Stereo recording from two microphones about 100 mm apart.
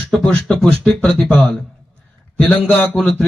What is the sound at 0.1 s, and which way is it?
Speech, 5° left (ahead or behind).